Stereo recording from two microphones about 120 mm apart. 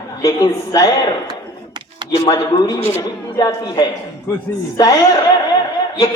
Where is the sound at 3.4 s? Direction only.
35° left (ahead or behind).